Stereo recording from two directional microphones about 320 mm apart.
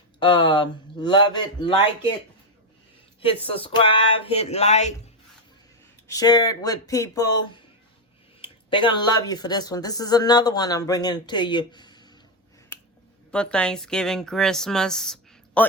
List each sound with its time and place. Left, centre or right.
0.2 s speech: centre
3.4 s speech: centre
6.1 s speech: centre
12.7 s finger snapping: centre
13.3 s speech: centre